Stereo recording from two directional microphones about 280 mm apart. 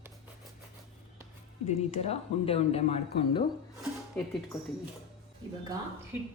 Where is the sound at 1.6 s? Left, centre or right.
Left.